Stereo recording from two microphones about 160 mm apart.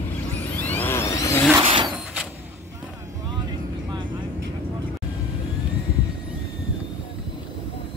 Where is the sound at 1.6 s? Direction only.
30° right (ahead or behind).